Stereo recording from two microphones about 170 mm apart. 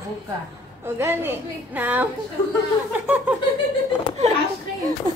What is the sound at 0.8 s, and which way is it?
A woman's voice, 15° right (ahead or behind).